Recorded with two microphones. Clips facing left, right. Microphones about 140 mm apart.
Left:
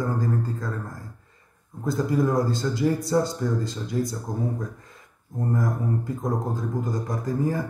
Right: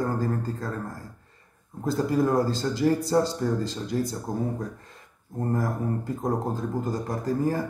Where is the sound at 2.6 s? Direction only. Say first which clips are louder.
Even; 40° right (ahead or behind).